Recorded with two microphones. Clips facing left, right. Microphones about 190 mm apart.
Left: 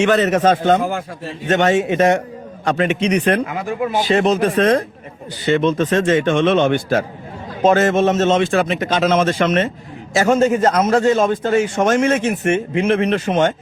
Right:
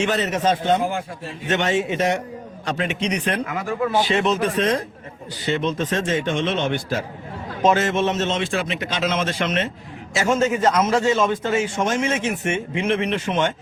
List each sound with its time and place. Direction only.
0.0 s a man's voice: 60° left (ahead or behind)
3.4 s speech: 25° left (ahead or behind)
4.1 s a man's voice: 40° left (ahead or behind)
11.9 s a man's voice: 55° left (ahead or behind)
12.8 s speech: 40° left (ahead or behind)